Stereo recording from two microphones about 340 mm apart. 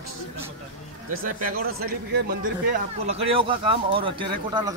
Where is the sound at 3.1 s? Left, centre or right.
Centre.